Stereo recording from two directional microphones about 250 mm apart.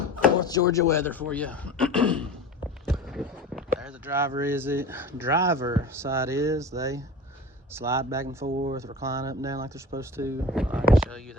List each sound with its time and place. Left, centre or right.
0.3 s speech: centre
2.8 s a sound: centre
4.4 s speech: centre
8.4 s speech: right
9.0 s speech: centre
10.9 s a sound: centre